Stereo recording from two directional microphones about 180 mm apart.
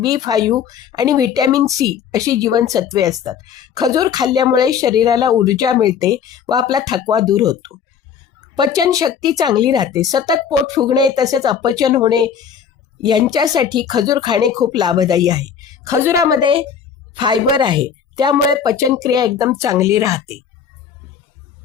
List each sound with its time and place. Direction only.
0.0 s a woman's voice: 20° right (ahead or behind)